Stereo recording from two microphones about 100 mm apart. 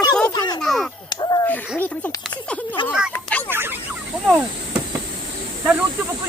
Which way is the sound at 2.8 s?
55° left (ahead or behind).